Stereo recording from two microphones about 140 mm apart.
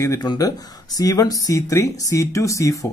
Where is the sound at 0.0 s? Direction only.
25° left (ahead or behind).